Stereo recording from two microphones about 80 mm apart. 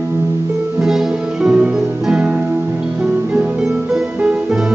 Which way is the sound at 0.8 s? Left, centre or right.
Centre.